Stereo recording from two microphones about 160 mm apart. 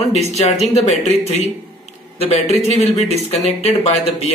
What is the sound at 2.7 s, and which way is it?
A man's voice, 45° left (ahead or behind).